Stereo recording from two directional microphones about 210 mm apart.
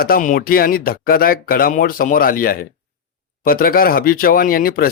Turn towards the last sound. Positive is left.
turn(degrees=45)  # may be behind; listen again after turning